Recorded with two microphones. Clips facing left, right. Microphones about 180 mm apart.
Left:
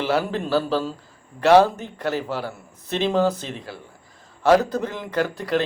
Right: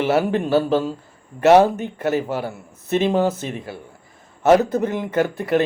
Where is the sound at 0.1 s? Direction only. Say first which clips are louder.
Right 3 dB; 20° right (ahead or behind).